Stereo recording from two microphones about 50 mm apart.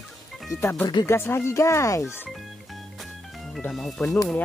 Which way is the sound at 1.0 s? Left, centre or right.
Left.